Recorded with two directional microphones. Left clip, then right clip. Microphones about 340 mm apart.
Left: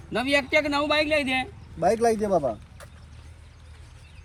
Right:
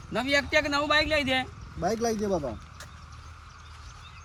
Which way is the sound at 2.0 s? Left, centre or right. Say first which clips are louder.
Left 6 dB; centre.